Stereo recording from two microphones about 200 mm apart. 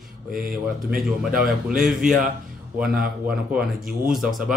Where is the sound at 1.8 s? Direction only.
Centre (ahead or behind).